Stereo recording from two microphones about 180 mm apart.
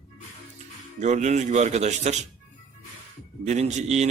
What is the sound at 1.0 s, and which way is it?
A man's voice, 40° right (ahead or behind).